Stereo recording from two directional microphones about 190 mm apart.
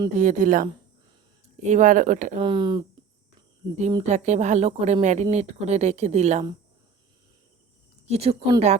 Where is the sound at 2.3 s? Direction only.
25° right (ahead or behind).